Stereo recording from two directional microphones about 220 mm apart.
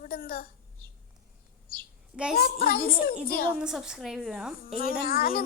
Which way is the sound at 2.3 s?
45° left (ahead or behind).